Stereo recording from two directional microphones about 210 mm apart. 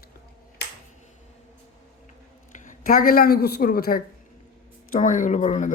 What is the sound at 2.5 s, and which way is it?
Speech, 40° left (ahead or behind).